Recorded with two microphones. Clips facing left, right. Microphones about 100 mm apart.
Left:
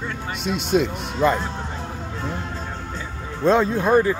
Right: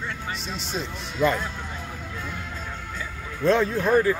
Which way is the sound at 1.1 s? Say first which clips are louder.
Left 3 dB; 30° left (ahead or behind).